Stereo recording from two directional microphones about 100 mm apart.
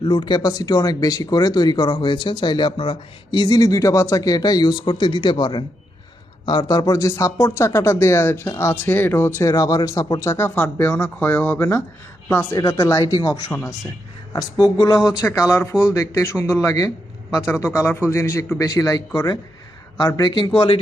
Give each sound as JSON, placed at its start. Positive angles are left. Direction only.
{"t": 0.0, "sound": "speech", "side_deg": 55}
{"t": 10.5, "sound": "speech", "side_deg": 15}
{"t": 12.5, "sound": "speech", "side_deg": 30}
{"t": 15.2, "sound": "speech", "side_deg": 25}
{"t": 17.5, "sound": "speech", "side_deg": 25}
{"t": 18.4, "sound": "speech", "side_deg": 20}
{"t": 18.7, "sound": "speech", "side_deg": 40}